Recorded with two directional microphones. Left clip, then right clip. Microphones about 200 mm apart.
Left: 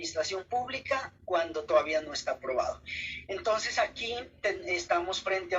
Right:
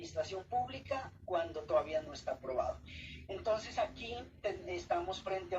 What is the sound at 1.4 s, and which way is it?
A woman's voice, 5° left (ahead or behind).